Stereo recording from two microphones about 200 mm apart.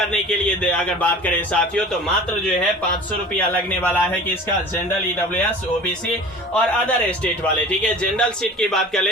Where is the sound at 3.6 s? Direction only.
10° left (ahead or behind).